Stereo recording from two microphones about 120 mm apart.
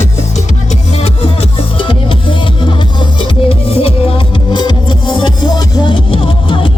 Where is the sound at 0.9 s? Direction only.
55° left (ahead or behind).